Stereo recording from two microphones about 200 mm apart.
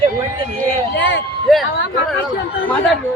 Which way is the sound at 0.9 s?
65° left (ahead or behind).